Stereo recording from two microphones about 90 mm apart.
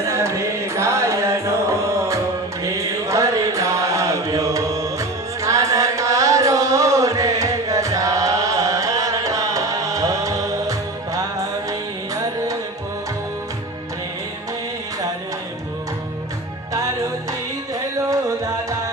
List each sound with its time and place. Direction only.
0.0 s music: 30° right (ahead or behind)
2.6 s mantra: 35° right (ahead or behind)